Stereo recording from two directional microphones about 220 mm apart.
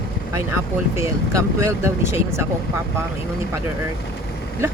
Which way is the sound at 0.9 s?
15° right (ahead or behind).